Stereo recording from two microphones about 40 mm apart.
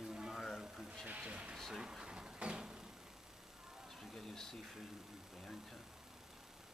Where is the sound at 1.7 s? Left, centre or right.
Centre.